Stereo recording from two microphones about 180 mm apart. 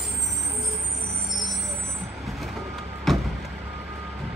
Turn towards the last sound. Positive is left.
turn(degrees=0)  # may be behind; listen again after turning